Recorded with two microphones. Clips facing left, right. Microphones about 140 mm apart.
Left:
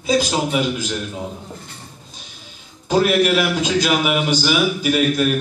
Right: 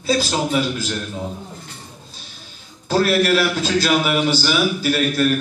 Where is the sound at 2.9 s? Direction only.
15° left (ahead or behind).